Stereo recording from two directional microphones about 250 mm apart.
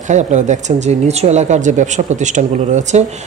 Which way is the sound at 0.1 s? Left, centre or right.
Right.